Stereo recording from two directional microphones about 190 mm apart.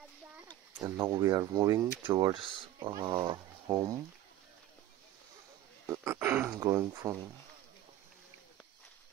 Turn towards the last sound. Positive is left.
turn(degrees=-20)  # may be behind; listen again after turning